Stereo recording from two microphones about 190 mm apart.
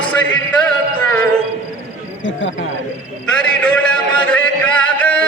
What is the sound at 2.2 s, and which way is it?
Speech, 80° left.